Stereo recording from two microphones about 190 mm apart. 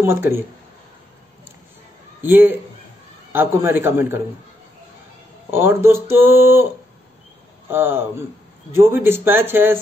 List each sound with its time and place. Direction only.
0.0 s speech: 15° right (ahead or behind)
2.2 s speech: 10° right (ahead or behind)
5.5 s speech: 10° right (ahead or behind)
7.7 s speech: 10° right (ahead or behind)